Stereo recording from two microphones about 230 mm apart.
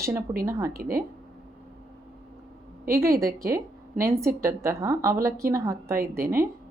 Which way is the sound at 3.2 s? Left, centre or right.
Centre.